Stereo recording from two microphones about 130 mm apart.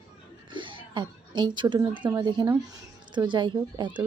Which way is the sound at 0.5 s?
40° right (ahead or behind).